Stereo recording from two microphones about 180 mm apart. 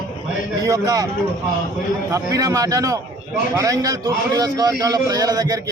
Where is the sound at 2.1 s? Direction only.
20° right (ahead or behind).